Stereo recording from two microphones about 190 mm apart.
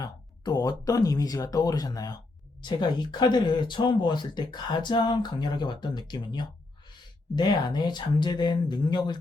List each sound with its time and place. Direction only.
0.0 s speech: 20° left (ahead or behind)